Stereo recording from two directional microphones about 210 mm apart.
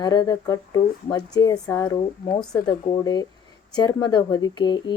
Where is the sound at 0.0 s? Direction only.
20° left (ahead or behind).